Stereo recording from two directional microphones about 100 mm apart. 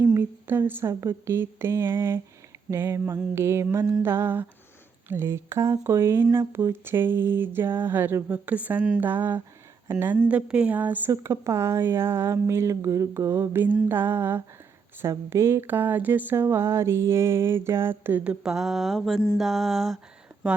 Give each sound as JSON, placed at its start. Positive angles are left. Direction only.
{"t": 0.0, "sound": "speech", "side_deg": -25}
{"t": 19.4, "sound": "mantra", "side_deg": 0}